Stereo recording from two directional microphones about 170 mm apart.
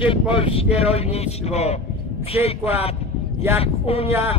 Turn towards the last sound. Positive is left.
turn(degrees=35)  # may be behind; listen again after turning